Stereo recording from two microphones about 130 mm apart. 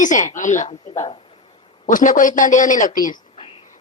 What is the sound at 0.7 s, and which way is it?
Speech, 50° left (ahead or behind).